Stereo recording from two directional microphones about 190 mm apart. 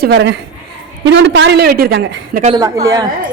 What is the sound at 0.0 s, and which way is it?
A woman's voice, 65° right (ahead or behind).